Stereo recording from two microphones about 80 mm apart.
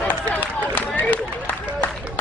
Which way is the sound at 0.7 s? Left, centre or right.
Left.